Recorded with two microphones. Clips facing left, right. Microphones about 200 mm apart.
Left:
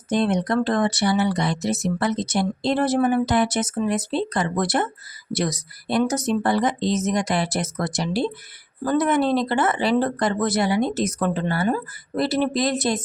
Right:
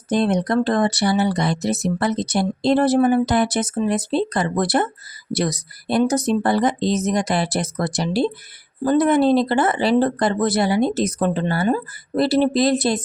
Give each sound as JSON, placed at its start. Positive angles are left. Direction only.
{"t": 0.1, "sound": "speech", "side_deg": -35}